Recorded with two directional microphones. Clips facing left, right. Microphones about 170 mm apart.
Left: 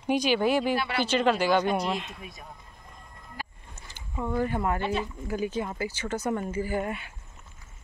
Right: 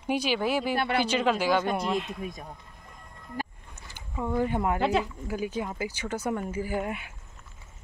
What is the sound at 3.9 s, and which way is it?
Speech, 10° right (ahead or behind).